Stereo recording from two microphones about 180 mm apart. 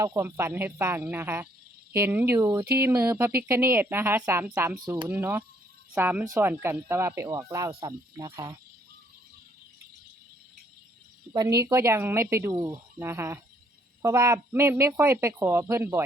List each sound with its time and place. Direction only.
0.0 s speech: 15° right (ahead or behind)
11.3 s speech: 15° right (ahead or behind)
13.0 s speech: 15° right (ahead or behind)